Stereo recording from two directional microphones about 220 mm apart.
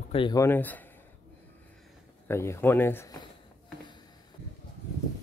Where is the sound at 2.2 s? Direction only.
10° left (ahead or behind).